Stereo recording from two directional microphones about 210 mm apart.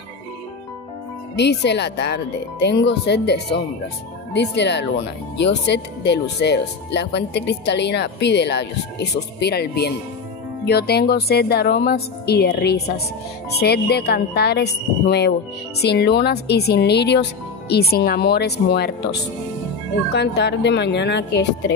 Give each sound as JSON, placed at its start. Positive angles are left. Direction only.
{"t": 1.3, "sound": "speech", "side_deg": 55}
{"t": 20.1, "sound": "speech", "side_deg": 55}